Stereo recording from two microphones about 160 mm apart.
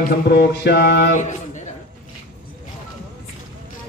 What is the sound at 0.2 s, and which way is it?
Mantra, 90° left.